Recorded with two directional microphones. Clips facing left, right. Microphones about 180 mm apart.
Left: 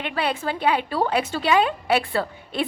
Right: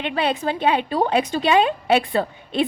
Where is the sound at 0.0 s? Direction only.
25° right (ahead or behind).